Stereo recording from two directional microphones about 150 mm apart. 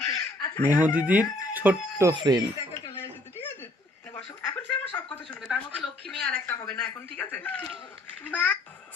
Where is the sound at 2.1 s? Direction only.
30° right (ahead or behind).